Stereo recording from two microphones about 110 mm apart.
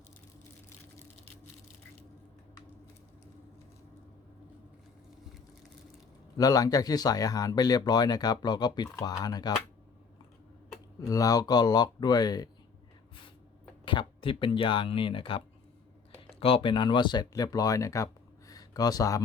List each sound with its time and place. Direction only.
6.3 s speech: 35° left (ahead or behind)
11.1 s speech: 35° left (ahead or behind)
13.8 s speech: 50° left (ahead or behind); by 19.2 s 35° left (ahead or behind)